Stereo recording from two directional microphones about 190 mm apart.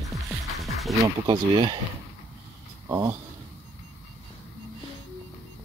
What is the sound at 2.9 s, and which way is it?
Speech, 15° right (ahead or behind).